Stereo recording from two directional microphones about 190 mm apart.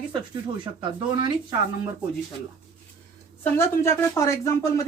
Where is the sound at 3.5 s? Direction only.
15° left (ahead or behind).